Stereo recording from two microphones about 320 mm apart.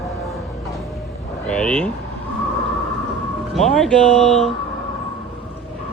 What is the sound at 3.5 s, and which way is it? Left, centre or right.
Speech, centre.